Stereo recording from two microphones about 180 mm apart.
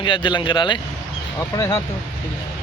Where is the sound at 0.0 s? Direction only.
25° left (ahead or behind).